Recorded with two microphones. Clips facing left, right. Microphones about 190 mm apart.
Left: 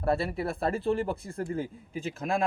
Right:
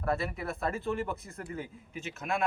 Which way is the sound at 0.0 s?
30° left (ahead or behind).